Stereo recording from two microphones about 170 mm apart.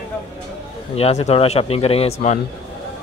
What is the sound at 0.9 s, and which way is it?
Speech, 40° left (ahead or behind).